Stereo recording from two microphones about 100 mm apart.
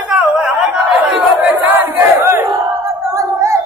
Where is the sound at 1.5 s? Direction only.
20° right (ahead or behind).